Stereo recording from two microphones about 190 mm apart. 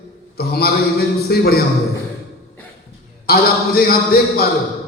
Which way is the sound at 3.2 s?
55° left (ahead or behind).